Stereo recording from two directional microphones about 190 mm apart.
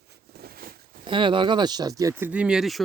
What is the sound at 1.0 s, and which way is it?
Speech, 25° right (ahead or behind).